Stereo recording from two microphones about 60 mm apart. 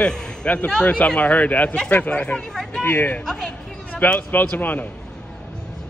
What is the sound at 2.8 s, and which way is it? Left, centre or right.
Speech, left.